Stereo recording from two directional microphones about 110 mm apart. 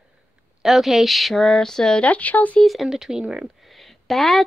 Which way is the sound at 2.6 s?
Centre (ahead or behind).